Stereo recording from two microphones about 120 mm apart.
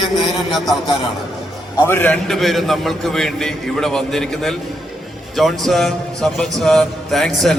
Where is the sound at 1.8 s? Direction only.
15° left (ahead or behind).